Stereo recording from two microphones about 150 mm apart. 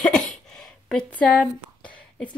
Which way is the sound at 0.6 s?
5° left (ahead or behind).